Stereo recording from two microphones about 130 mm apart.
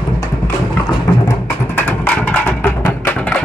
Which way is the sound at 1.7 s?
15° left (ahead or behind).